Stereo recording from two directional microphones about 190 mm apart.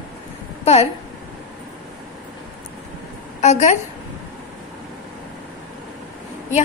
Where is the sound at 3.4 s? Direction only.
40° left (ahead or behind).